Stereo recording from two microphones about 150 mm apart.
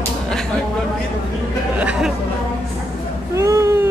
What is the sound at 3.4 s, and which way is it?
Baby cry, 20° right (ahead or behind).